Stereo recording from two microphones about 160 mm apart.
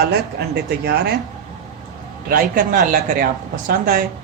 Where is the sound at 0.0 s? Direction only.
90° right.